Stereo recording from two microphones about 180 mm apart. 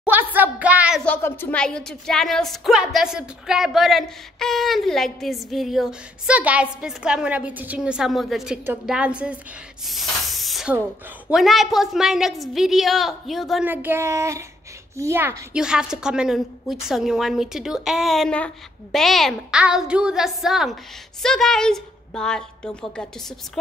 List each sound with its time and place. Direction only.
0.0 s speech: 10° right (ahead or behind)
1.0 s a woman's voice: 10° left (ahead or behind)
13.7 s a woman's voice: 10° right (ahead or behind); by 23.6 s 5° left (ahead or behind)